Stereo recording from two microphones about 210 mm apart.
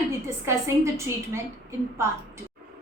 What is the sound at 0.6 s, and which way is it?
A woman's voice, 15° right (ahead or behind).